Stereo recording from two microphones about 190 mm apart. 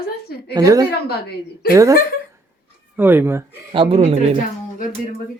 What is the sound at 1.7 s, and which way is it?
Speech, 15° right (ahead or behind).